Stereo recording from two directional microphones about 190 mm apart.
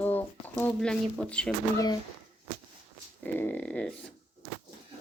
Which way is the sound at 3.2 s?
10° left (ahead or behind).